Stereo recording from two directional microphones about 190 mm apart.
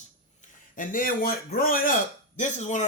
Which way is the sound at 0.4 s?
45° left (ahead or behind).